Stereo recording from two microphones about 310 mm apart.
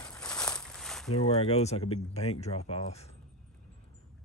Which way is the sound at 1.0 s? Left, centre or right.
Centre.